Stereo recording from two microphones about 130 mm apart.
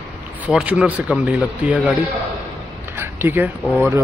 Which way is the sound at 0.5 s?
5° right (ahead or behind).